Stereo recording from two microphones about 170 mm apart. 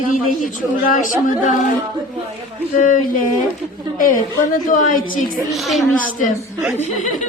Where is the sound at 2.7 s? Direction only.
50° left (ahead or behind).